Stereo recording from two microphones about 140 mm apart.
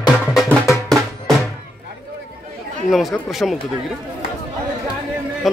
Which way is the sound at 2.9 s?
Centre (ahead or behind).